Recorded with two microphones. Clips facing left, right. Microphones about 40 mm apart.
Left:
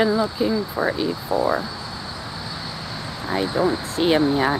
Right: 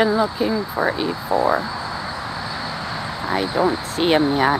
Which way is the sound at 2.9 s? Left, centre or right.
Right.